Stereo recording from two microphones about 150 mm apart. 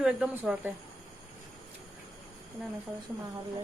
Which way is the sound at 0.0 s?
5° right (ahead or behind).